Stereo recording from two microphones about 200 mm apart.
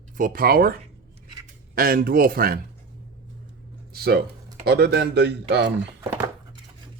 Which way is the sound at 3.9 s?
50° right (ahead or behind).